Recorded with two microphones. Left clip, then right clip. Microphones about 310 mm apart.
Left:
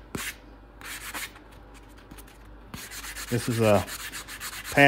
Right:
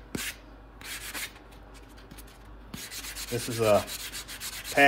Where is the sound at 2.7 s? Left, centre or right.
Centre.